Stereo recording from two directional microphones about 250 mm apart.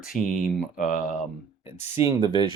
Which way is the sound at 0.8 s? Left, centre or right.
Left.